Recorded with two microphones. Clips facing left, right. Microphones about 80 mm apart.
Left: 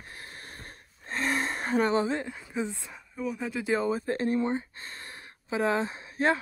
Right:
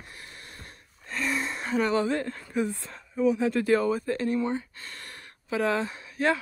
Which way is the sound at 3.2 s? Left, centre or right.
Centre.